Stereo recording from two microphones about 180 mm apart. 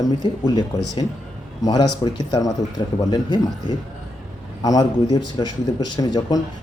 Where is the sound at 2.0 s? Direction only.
30° left (ahead or behind).